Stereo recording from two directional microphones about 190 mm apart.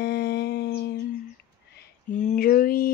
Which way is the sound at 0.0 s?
60° left (ahead or behind).